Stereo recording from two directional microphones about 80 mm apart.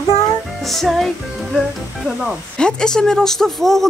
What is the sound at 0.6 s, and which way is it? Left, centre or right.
Speech, centre.